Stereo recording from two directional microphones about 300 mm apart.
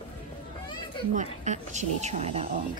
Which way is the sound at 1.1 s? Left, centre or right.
Right.